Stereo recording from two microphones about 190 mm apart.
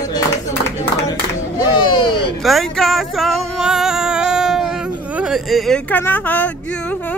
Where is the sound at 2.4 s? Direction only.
Centre (ahead or behind).